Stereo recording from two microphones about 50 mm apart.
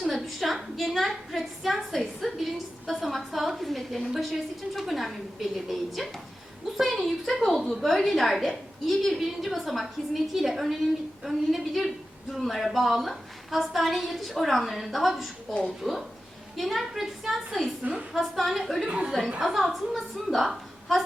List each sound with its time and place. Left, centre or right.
0.0 s a sound: centre
4.1 s a woman's voice: centre
18.9 s a woman's voice: right
19.4 s a woman's voice: centre